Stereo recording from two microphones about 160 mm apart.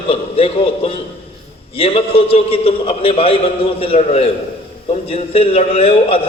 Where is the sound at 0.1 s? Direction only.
35° left (ahead or behind).